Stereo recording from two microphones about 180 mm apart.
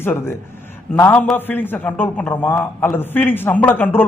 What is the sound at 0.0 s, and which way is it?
A man's voice, 10° left (ahead or behind).